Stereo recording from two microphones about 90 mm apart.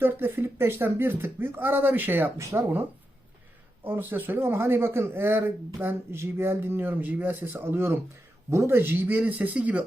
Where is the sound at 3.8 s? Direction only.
25° right (ahead or behind).